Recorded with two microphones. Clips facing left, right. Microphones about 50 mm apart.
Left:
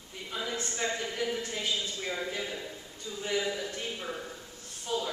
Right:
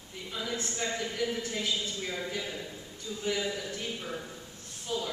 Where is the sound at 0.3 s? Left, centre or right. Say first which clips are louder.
Even; centre.